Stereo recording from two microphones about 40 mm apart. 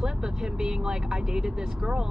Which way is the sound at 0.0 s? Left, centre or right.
Centre.